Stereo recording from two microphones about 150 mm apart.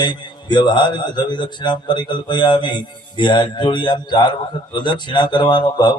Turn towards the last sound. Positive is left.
turn(degrees=30)  # may be behind; listen again after turning